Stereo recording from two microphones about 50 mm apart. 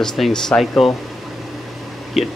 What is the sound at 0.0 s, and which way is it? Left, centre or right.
Speech, centre.